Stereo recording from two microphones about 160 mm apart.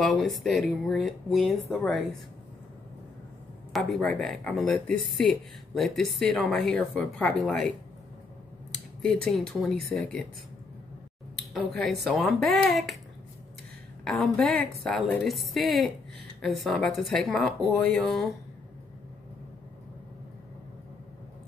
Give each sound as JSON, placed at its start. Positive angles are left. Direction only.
{"t": 0.0, "sound": "a woman's voice", "side_deg": 0}
{"t": 3.7, "sound": "a woman's voice", "side_deg": 5}
{"t": 9.0, "sound": "a woman's voice", "side_deg": 5}
{"t": 11.5, "sound": "a woman's voice", "side_deg": 0}
{"t": 14.0, "sound": "a woman's voice", "side_deg": 5}